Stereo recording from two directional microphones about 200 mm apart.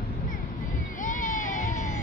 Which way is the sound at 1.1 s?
40° left (ahead or behind).